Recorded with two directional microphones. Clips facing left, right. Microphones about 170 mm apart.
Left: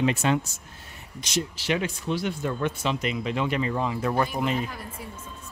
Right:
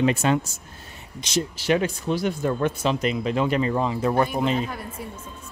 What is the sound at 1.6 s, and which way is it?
Speech, 45° right (ahead or behind).